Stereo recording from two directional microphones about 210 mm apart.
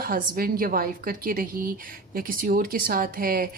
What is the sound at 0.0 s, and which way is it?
A woman's voice, 45° right (ahead or behind).